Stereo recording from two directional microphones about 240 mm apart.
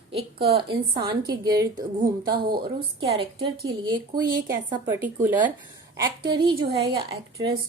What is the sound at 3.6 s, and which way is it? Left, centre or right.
A woman's voice, centre.